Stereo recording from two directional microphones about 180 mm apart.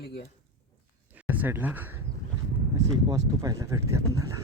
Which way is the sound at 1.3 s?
10° right (ahead or behind).